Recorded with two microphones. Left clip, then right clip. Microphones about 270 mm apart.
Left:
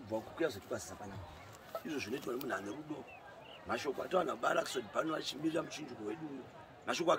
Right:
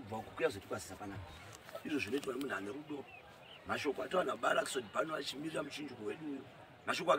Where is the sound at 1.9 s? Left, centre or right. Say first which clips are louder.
Right 5 dB; centre.